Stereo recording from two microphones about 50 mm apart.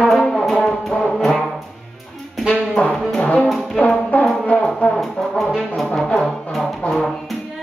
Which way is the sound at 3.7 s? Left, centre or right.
Left.